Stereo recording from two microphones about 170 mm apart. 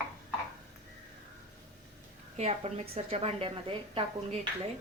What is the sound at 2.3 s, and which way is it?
Speech, 40° right (ahead or behind).